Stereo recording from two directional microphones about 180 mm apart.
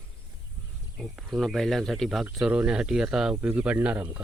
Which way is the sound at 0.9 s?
Centre (ahead or behind).